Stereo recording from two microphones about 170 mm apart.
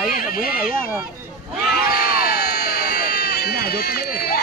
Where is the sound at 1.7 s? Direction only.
65° left (ahead or behind).